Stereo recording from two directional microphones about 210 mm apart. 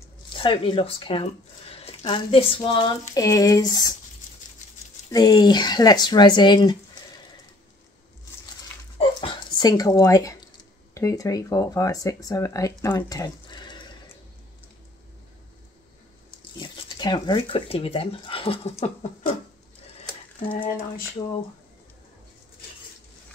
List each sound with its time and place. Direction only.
0.4 s speech: 25° left (ahead or behind)
5.1 s speech: 20° left (ahead or behind)
8.9 s speech: 25° left (ahead or behind)
16.6 s speech: 20° left (ahead or behind)